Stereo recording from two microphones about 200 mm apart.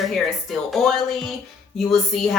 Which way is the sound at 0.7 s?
Centre (ahead or behind).